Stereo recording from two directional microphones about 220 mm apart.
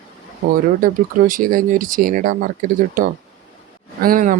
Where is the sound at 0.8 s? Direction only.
40° right (ahead or behind).